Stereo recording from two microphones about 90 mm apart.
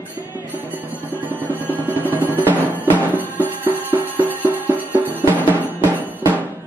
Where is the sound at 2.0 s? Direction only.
20° right (ahead or behind).